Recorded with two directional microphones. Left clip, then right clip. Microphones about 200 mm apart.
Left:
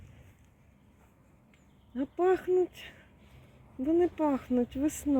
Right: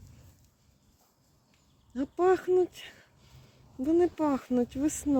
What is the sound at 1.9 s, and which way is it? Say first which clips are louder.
Speech: right 2 dB; 5° right (ahead or behind).